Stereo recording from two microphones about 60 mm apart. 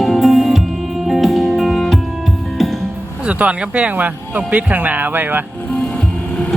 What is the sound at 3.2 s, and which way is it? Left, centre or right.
Speech, right.